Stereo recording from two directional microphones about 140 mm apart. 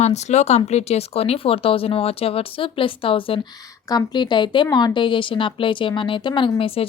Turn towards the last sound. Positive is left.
turn(degrees=40)  # may be behind; listen again after turning